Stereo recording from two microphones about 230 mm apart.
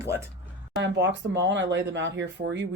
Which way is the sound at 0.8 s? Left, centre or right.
Right.